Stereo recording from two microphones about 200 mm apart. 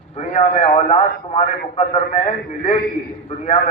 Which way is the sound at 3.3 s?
30° left (ahead or behind).